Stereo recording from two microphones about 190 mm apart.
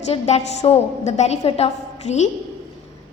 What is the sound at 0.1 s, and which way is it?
A woman's voice, 35° left (ahead or behind).